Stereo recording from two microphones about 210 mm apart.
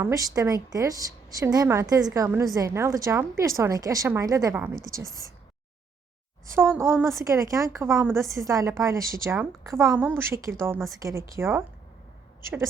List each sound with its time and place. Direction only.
0.0 s a woman's voice: 15° right (ahead or behind)
6.4 s a woman's voice: 10° right (ahead or behind)